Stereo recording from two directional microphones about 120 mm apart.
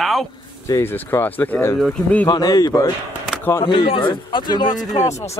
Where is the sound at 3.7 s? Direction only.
45° left (ahead or behind).